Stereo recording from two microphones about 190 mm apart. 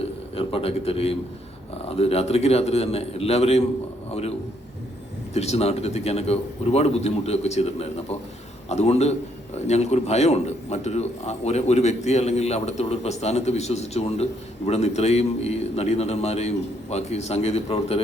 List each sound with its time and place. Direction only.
0.3 s a man's voice: 30° left (ahead or behind)